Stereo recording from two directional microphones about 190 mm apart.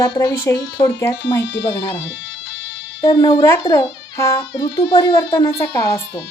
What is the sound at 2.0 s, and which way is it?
Music, 75° left (ahead or behind).